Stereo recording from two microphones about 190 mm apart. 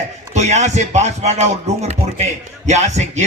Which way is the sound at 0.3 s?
35° right (ahead or behind).